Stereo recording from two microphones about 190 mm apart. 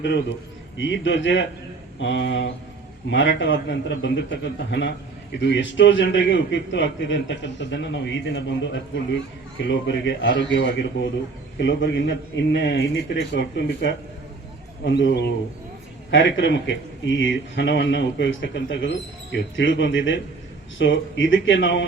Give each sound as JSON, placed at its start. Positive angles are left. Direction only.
{"t": 0.0, "sound": "a man's voice", "side_deg": 65}
{"t": 16.1, "sound": "a man's voice", "side_deg": 75}